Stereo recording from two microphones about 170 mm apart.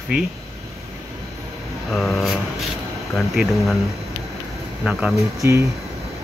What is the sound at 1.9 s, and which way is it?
Speech, centre (ahead or behind).